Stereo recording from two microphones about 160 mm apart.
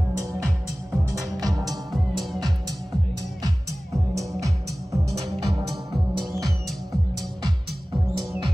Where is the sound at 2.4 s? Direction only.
25° right (ahead or behind).